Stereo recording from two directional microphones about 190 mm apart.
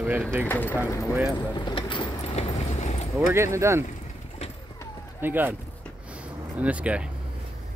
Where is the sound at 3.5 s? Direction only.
15° right (ahead or behind).